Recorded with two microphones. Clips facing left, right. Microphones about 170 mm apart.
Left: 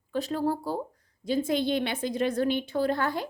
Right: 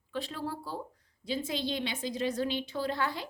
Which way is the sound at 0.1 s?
45° left (ahead or behind).